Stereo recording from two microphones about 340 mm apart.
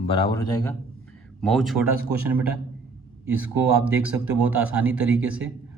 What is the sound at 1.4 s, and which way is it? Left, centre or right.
Speech, centre.